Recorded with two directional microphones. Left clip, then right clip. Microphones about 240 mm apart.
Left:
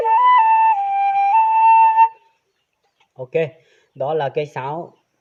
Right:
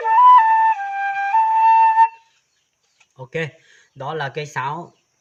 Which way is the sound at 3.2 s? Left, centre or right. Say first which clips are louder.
Left 6 dB; centre.